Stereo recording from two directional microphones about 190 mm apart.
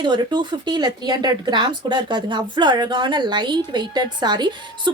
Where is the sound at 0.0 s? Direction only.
25° right (ahead or behind).